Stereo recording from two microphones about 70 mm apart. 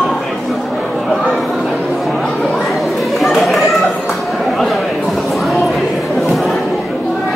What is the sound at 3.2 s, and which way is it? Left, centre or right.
Chatter, centre.